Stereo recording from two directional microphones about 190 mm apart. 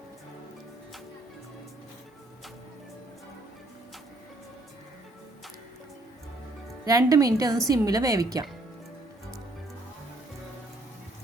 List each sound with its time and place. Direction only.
6.8 s a woman's voice: 20° right (ahead or behind)